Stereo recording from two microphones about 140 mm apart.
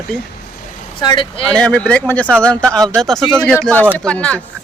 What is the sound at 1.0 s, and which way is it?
Speech, 35° left (ahead or behind).